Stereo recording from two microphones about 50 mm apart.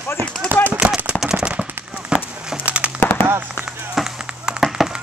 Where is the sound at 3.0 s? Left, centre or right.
Left.